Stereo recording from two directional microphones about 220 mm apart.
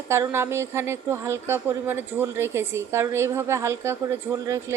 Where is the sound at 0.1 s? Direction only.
10° right (ahead or behind).